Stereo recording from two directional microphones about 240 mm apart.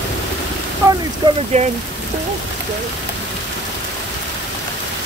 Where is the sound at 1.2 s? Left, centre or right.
Right.